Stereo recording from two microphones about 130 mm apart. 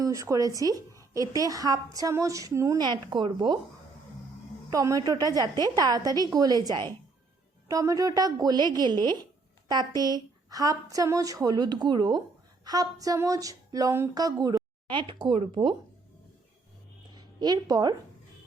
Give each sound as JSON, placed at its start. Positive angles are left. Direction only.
{"t": 0.0, "sound": "a woman's voice", "side_deg": -25}
{"t": 4.7, "sound": "a woman's voice", "side_deg": -25}
{"t": 17.2, "sound": "a woman's voice", "side_deg": -30}